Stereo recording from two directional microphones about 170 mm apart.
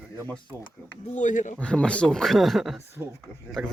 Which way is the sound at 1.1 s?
45° left (ahead or behind).